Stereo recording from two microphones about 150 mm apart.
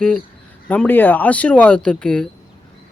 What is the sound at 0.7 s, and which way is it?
Speech, 10° left (ahead or behind).